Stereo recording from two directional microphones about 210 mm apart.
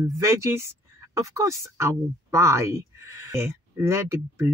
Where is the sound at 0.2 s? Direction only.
15° right (ahead or behind).